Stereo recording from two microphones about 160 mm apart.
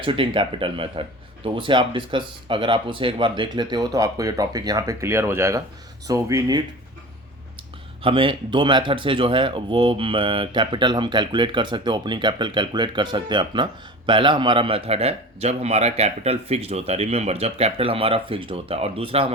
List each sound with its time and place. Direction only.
0.0 s a man's voice: 30° right (ahead or behind)
8.0 s a man's voice: 30° right (ahead or behind)